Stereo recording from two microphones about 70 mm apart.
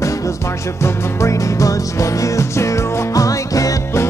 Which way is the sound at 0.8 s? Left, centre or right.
Left.